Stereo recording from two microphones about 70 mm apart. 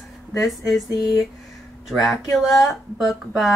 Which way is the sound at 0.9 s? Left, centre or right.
Left.